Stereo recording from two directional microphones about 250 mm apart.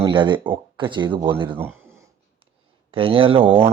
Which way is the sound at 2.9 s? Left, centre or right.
Right.